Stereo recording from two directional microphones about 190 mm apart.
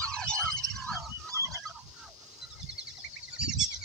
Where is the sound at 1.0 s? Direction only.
15° right (ahead or behind).